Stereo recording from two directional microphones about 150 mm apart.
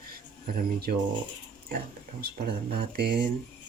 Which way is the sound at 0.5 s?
90° right.